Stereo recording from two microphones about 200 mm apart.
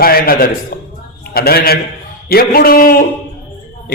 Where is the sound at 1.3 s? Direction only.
50° left (ahead or behind).